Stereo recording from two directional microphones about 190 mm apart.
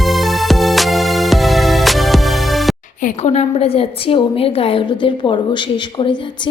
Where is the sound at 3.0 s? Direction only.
40° left (ahead or behind).